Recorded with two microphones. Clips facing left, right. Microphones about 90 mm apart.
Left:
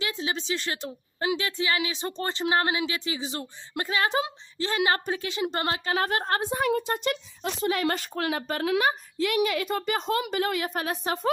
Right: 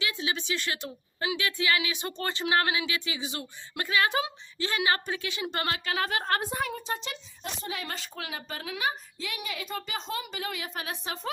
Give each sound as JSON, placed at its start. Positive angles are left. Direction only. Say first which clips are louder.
{"t": 0.0, "sound": "a woman's voice", "louder": "left 2 dB", "side_deg": 35}
{"t": 6.2, "sound": "a woman's voice", "louder": "left 2 dB", "side_deg": 25}
{"t": 6.6, "sound": "a woman's voice", "louder": "left 7 dB", "side_deg": 60}